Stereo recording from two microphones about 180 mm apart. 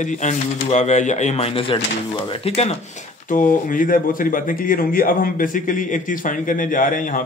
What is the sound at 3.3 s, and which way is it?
A man's voice, 45° left (ahead or behind).